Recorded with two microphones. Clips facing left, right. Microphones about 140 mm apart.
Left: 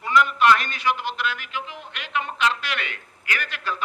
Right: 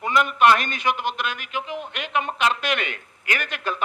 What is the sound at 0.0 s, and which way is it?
Speech, 20° right (ahead or behind).